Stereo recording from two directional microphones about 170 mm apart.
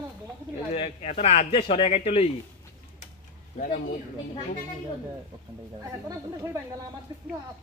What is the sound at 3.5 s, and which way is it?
Speech, 50° left (ahead or behind).